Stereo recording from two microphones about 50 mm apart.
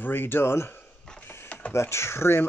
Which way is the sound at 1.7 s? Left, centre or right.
Left.